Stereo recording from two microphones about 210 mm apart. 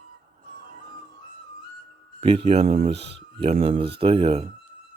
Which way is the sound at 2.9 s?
55° right (ahead or behind).